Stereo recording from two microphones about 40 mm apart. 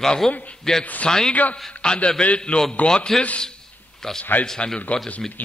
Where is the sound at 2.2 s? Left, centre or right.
Left.